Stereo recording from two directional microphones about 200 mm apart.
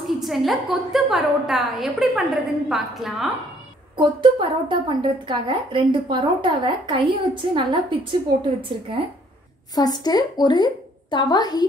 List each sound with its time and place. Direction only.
0.0 s a woman's voice: centre (ahead or behind)
3.9 s a woman's voice: 25° right (ahead or behind)
9.8 s a woman's voice: 20° left (ahead or behind)